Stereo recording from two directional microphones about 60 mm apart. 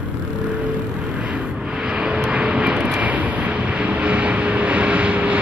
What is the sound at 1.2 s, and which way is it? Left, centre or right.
Vehicle, centre.